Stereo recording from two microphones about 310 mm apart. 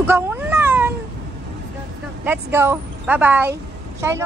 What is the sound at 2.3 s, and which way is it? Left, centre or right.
A woman's voice, centre.